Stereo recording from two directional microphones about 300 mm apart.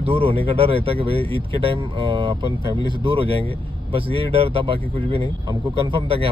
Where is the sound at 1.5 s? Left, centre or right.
Centre.